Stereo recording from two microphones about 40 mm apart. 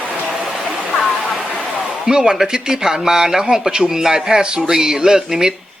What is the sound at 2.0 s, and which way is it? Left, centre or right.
Speech, centre.